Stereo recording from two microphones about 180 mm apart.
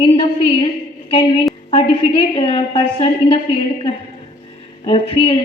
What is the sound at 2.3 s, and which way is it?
A woman's voice, 35° left (ahead or behind).